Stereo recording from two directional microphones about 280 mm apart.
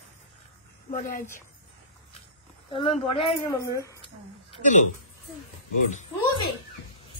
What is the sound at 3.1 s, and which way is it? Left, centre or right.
Speech, centre.